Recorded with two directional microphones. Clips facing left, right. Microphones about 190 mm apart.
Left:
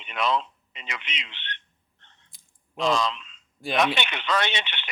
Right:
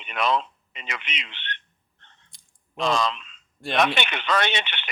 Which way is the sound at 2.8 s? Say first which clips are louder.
Even; 55° right (ahead or behind).